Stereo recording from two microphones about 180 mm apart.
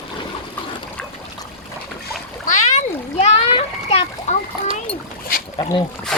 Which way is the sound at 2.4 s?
45° left (ahead or behind).